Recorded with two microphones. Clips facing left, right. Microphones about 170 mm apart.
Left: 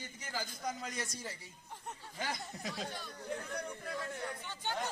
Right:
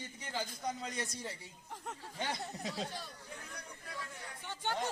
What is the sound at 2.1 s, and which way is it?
Speech, 30° right (ahead or behind).